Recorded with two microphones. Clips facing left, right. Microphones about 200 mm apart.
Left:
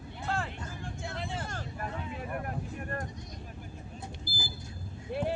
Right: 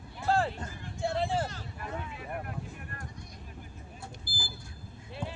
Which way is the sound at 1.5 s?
50° left (ahead or behind).